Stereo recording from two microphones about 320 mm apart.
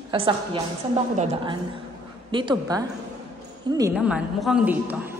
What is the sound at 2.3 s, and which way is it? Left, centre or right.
A woman's voice, centre.